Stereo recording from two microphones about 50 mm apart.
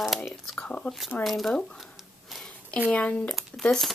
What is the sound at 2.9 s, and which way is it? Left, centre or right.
Speech, left.